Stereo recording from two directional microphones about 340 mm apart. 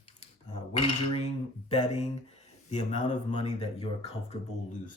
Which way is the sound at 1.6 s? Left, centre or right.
Centre.